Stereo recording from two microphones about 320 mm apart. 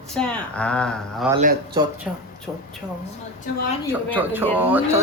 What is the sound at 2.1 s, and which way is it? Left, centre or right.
Speech, centre.